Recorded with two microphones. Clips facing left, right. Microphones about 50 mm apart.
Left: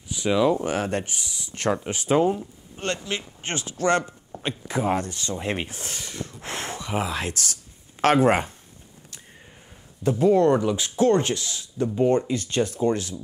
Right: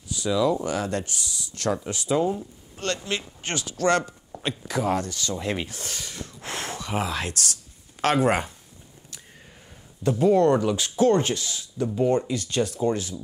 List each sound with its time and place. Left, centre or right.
0.3 s speech: left
2.0 s speech: left
2.3 s speech: left
10.0 s speech: left